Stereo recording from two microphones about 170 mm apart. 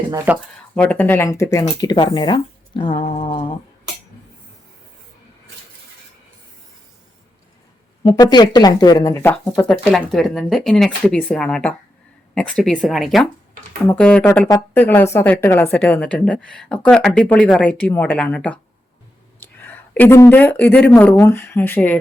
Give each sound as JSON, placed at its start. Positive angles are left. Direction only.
{"t": 0.3, "sound": "speech", "side_deg": -10}
{"t": 0.8, "sound": "a woman's voice", "side_deg": 10}
{"t": 3.0, "sound": "mantra", "side_deg": 35}
{"t": 8.0, "sound": "speech", "side_deg": 25}
{"t": 9.1, "sound": "a woman's voice", "side_deg": 10}
{"t": 14.3, "sound": "a woman's voice", "side_deg": 20}